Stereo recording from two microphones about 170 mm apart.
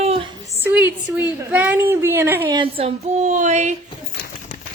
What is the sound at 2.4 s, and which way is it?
Speech, 30° right (ahead or behind).